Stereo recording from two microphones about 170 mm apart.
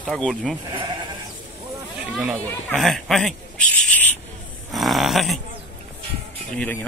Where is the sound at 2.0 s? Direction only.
5° right (ahead or behind).